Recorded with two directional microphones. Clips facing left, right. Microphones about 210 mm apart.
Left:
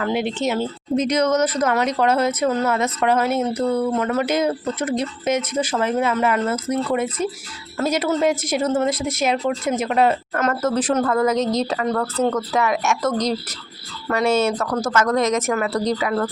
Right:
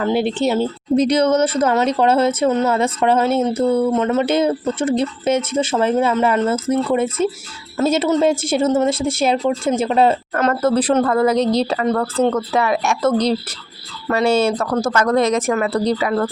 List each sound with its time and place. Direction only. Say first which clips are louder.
0.0 s speech: right 4 dB; 30° right (ahead or behind)